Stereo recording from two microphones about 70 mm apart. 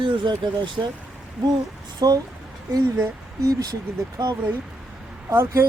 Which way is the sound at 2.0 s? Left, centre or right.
Right.